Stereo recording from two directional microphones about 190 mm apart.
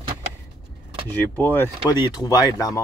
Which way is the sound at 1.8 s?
20° left (ahead or behind).